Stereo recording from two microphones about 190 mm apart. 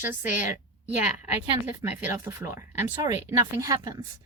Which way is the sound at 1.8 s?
15° right (ahead or behind).